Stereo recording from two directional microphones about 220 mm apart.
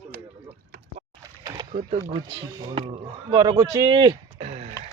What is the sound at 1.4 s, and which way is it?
Splash, 15° right (ahead or behind).